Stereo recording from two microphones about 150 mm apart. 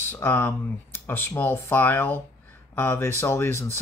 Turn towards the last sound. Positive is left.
turn(degrees=15)  # may be behind; listen again after turning